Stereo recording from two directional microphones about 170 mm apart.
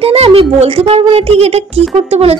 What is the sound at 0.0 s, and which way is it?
Speech, 35° right (ahead or behind).